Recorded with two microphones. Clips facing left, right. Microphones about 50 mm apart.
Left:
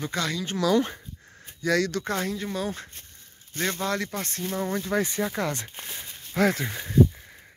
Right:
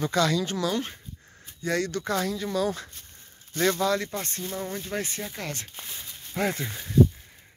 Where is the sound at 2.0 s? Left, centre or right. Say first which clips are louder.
Right 1 dB; left.